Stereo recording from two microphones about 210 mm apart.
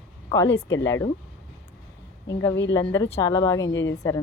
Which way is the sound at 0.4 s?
60° left (ahead or behind).